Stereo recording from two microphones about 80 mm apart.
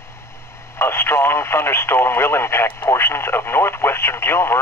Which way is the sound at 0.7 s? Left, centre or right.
Left.